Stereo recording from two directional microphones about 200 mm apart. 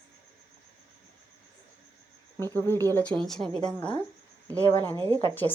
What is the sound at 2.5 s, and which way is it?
A woman's voice, 10° left (ahead or behind).